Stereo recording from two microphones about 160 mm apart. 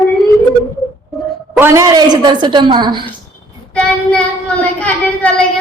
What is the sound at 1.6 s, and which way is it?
A woman's voice, 20° right (ahead or behind).